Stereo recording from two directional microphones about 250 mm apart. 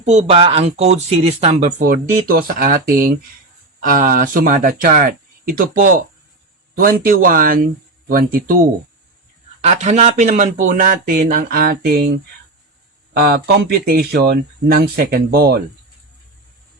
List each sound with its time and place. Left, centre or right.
0.0 s speech: right
9.6 s speech: right
13.2 s speech: right